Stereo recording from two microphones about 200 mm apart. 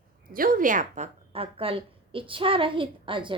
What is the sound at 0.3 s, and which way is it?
A woman's voice, 45° right (ahead or behind).